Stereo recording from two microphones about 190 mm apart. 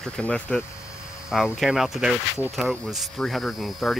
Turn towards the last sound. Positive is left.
turn(degrees=0)  # may be behind; listen again after turning